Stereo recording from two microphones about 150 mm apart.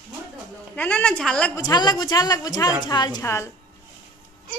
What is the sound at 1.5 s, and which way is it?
A woman's voice, 25° left (ahead or behind).